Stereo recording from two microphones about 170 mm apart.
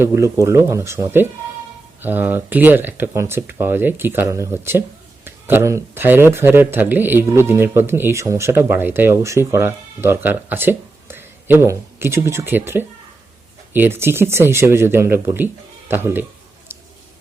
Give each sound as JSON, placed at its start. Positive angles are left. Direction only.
{"t": 0.0, "sound": "speech", "side_deg": -15}